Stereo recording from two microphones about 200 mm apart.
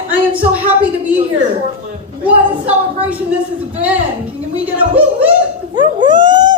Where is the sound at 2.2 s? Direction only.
5° right (ahead or behind).